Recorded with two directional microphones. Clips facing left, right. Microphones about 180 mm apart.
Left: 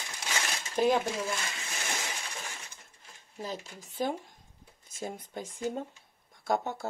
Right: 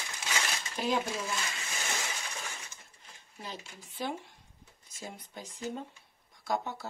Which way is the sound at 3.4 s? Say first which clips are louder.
Left 6 dB; 45° left (ahead or behind).